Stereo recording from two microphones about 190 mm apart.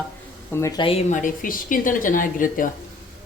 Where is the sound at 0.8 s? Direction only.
30° left (ahead or behind).